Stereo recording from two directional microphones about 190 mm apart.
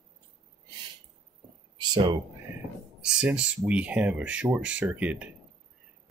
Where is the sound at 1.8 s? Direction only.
25° right (ahead or behind).